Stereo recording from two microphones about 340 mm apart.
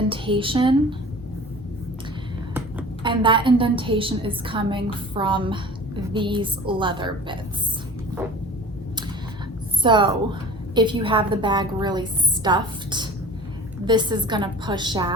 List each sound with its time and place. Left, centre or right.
0.1 s a woman's voice: centre
2.7 s a woman's voice: centre
9.8 s a woman's voice: centre